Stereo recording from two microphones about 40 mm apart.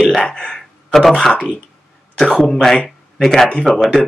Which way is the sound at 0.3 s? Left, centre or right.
Centre.